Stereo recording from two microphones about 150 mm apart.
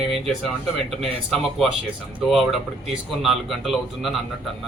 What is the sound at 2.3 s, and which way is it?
Speech, centre (ahead or behind).